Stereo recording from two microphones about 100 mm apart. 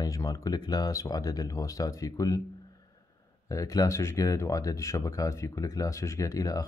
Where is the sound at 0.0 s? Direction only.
35° left (ahead or behind).